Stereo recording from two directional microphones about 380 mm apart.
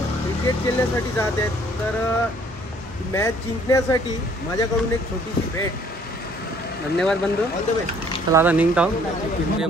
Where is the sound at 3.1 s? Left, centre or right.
Centre.